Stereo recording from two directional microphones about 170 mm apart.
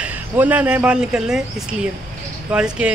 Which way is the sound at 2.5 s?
5° right (ahead or behind).